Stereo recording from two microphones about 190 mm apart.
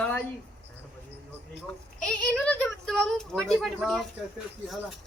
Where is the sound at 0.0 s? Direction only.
10° left (ahead or behind).